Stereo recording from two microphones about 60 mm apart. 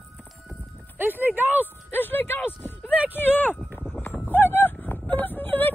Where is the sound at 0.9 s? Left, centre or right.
Right.